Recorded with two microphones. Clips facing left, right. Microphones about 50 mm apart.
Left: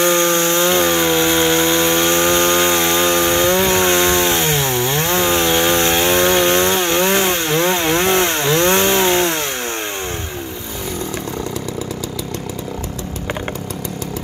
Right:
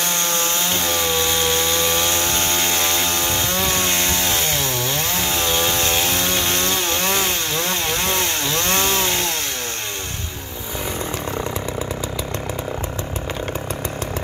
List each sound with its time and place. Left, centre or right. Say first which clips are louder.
0.0 s wood: left 8 dB; left